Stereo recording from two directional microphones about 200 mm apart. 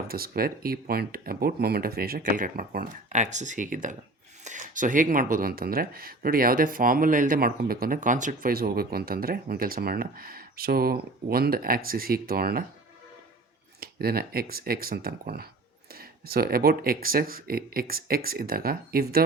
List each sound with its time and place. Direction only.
0.1 s speech: 50° right (ahead or behind)
13.7 s speech: 50° right (ahead or behind)